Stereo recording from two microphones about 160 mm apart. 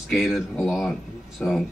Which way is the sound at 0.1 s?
Centre (ahead or behind).